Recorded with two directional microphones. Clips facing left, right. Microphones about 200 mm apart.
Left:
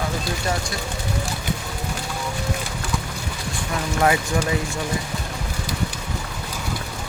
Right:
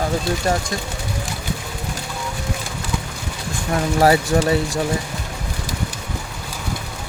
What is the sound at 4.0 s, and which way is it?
Speech, 35° right (ahead or behind).